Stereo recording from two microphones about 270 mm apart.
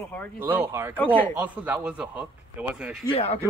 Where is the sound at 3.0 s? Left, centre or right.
Centre.